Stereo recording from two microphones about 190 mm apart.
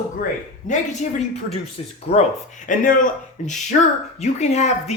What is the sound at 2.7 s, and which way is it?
Speech, 45° left (ahead or behind).